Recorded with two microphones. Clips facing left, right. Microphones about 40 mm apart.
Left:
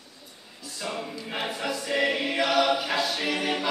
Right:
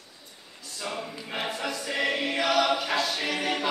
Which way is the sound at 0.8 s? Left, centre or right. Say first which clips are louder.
Left 1 dB; centre.